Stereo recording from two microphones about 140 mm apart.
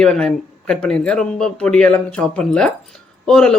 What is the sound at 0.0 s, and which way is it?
Speech, 5° left (ahead or behind).